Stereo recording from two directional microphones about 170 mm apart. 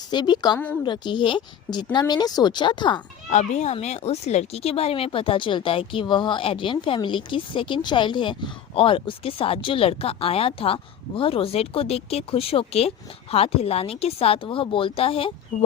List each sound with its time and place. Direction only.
0.1 s speech: 25° left (ahead or behind)
3.2 s speech: 45° left (ahead or behind)
15.5 s speech: 50° left (ahead or behind)